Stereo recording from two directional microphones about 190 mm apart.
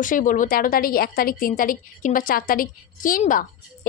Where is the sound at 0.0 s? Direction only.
45° left (ahead or behind).